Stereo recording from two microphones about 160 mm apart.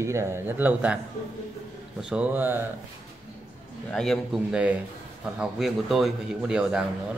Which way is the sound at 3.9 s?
5° left (ahead or behind).